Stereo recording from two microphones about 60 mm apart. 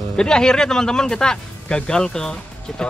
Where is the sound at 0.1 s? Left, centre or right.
Centre.